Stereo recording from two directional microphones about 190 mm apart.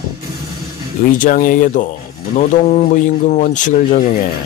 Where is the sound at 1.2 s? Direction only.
45° left (ahead or behind).